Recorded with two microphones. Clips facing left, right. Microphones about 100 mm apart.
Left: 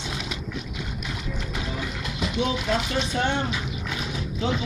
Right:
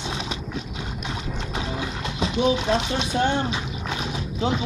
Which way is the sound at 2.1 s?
25° right (ahead or behind).